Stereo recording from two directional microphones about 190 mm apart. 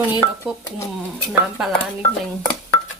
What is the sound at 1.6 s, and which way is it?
Speech, centre (ahead or behind).